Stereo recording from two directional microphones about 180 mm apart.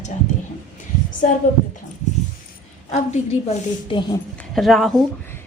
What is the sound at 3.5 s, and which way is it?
Speech, 30° left (ahead or behind).